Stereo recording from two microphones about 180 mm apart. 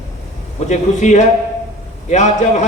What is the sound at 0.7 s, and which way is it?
A man's voice, 40° left (ahead or behind).